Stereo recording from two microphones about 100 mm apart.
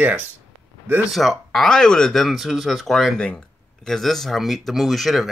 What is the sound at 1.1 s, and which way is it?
Speech, centre (ahead or behind).